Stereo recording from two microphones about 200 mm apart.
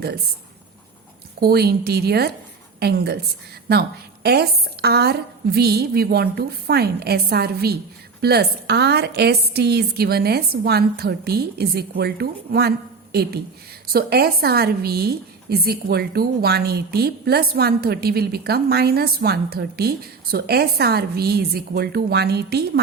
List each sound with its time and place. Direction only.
1.4 s a woman's voice: 50° right (ahead or behind)
13.8 s a woman's voice: 50° right (ahead or behind)